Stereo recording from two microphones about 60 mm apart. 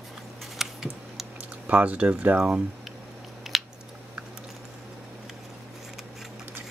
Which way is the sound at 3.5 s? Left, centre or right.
Centre.